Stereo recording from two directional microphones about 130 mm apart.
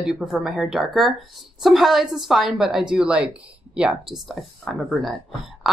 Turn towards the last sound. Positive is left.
turn(degrees=0)  # may be behind; listen again after turning